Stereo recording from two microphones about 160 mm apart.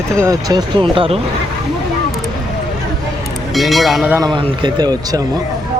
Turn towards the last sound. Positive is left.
turn(degrees=-25)  # may be behind; listen again after turning